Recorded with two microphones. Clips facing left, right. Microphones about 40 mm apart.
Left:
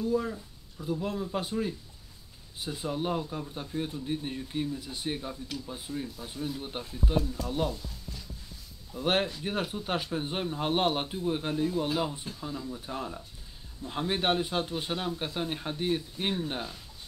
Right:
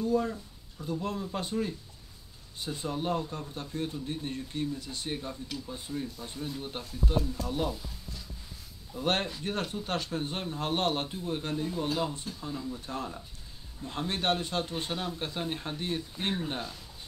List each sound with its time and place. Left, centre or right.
0.0 s speech: centre
6.8 s speech: left
7.2 s speech: centre
8.9 s speech: centre